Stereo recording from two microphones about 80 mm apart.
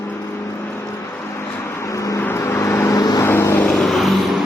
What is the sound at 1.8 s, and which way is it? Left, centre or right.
Vehicle, left.